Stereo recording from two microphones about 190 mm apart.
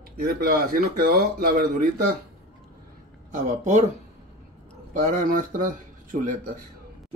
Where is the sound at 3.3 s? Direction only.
40° right (ahead or behind).